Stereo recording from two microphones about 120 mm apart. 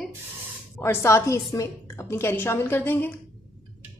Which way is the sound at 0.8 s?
20° left (ahead or behind).